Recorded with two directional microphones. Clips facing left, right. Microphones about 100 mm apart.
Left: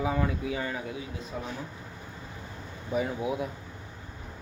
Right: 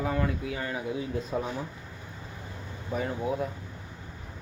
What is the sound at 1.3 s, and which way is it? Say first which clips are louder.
Speech: right 6 dB; 40° right (ahead or behind).